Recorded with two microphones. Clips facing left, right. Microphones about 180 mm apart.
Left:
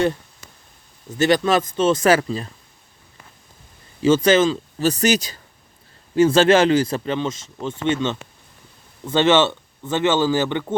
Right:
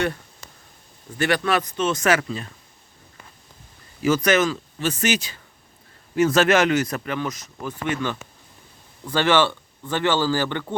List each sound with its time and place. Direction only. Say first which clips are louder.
1.2 s speech: left 5 dB; 25° left (ahead or behind)
4.0 s speech: left 4 dB; 25° left (ahead or behind)
6.1 s speech: left 4 dB; 30° left (ahead or behind)